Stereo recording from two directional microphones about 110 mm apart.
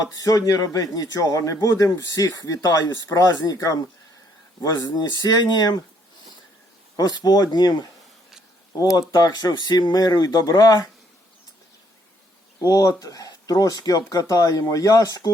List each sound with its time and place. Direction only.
0.2 s speech: 30° left (ahead or behind)
6.9 s speech: 40° left (ahead or behind)
9.0 s speech: 40° left (ahead or behind)
12.6 s speech: 35° left (ahead or behind)